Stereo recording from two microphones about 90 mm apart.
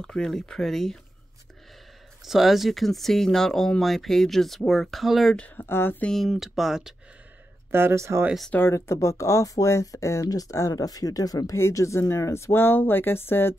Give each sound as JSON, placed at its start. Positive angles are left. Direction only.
{"t": 0.0, "sound": "speech", "side_deg": 5}
{"t": 2.2, "sound": "speech", "side_deg": 0}
{"t": 5.6, "sound": "speech", "side_deg": 25}
{"t": 6.0, "sound": "speech", "side_deg": 5}
{"t": 7.7, "sound": "speech", "side_deg": -30}
{"t": 8.6, "sound": "speech", "side_deg": 30}